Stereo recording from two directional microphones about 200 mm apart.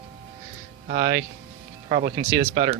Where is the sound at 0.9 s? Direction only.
45° right (ahead or behind).